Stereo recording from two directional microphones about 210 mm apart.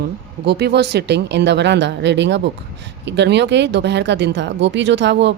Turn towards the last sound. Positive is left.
turn(degrees=-55)  # may be behind; listen again after turning